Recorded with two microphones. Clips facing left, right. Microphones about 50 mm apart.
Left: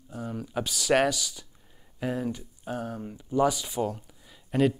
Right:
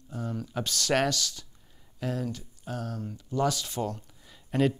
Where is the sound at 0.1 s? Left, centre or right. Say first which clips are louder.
Left 1 dB; centre.